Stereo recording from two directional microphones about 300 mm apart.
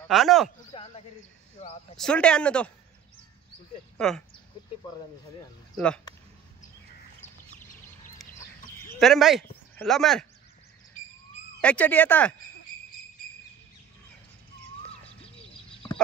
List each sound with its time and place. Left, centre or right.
0.1 s speech: centre
0.7 s speech: centre
2.0 s speech: centre
4.0 s speech: centre
4.6 s a sound: centre
5.8 s speech: centre
8.2 s chicken: centre
11.6 s speech: centre